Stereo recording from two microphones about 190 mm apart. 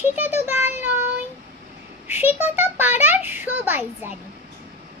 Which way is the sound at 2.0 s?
10° right (ahead or behind).